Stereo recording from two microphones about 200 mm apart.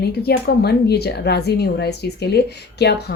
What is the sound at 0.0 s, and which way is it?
A woman's voice, 55° left (ahead or behind).